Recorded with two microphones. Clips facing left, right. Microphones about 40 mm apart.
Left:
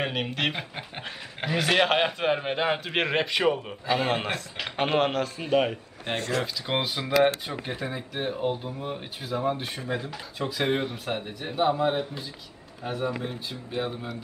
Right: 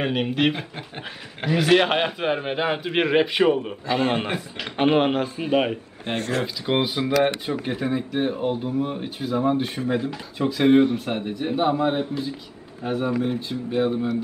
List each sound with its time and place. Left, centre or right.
0.0 s a man's voice: centre
6.1 s speech: right
6.4 s a man's voice: centre